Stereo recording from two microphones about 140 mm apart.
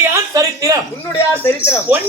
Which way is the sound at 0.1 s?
25° right (ahead or behind).